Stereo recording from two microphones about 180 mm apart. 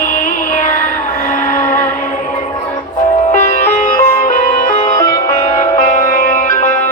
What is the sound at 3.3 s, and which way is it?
Music, 45° left (ahead or behind).